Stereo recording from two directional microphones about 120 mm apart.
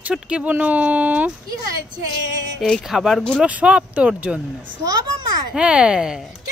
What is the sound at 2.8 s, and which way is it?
Speech, 5° right (ahead or behind).